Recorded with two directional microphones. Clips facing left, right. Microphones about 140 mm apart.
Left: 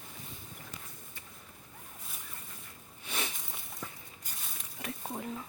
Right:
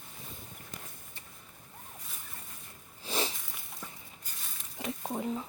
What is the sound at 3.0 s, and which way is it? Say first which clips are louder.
Sniff: right 5 dB; 30° right (ahead or behind).